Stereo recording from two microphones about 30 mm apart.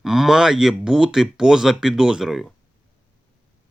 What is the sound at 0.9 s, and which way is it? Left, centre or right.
Speech, right.